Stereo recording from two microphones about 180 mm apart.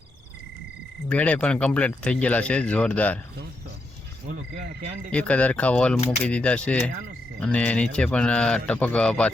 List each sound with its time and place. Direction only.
1.0 s speech: 10° left (ahead or behind)
4.3 s frog: 45° right (ahead or behind)
5.1 s speech: 10° left (ahead or behind)